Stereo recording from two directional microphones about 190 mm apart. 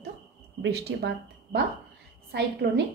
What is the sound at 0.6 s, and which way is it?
A woman's voice, 60° right (ahead or behind).